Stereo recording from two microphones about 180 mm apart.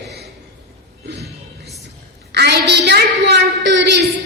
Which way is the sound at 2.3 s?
65° right (ahead or behind).